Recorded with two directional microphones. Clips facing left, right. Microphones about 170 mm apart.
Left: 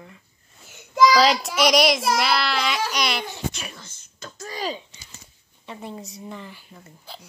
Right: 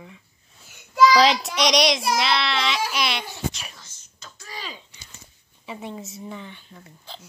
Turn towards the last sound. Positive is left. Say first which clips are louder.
# even
turn(degrees=5)  # may be behind; listen again after turning